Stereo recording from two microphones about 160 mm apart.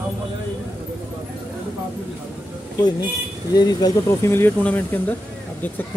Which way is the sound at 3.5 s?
25° left (ahead or behind).